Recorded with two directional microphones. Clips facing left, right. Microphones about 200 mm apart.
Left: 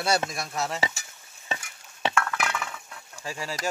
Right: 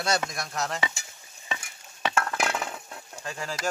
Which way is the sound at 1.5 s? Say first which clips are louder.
Left 2 dB; 30° left (ahead or behind).